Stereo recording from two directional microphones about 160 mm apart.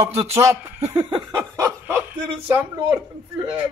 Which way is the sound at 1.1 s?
25° right (ahead or behind).